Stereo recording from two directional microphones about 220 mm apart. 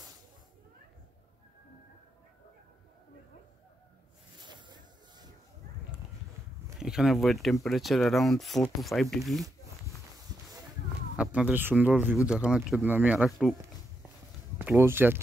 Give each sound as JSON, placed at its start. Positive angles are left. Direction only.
{"t": 4.4, "sound": "a sound", "side_deg": -20}
{"t": 6.8, "sound": "speech", "side_deg": 0}
{"t": 11.1, "sound": "speech", "side_deg": -5}
{"t": 14.6, "sound": "speech", "side_deg": -10}